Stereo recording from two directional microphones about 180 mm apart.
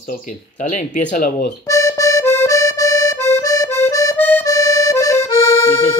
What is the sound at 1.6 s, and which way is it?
Accordion, 20° left (ahead or behind).